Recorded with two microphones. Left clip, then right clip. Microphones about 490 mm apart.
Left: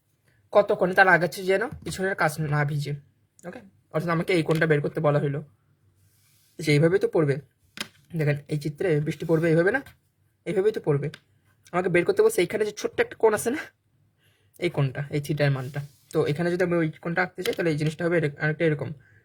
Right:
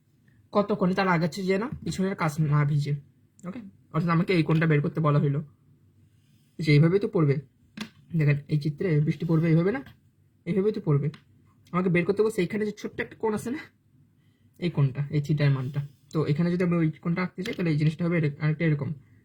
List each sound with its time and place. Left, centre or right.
0.5 s speech: left
4.0 s speech: left
6.6 s speech: left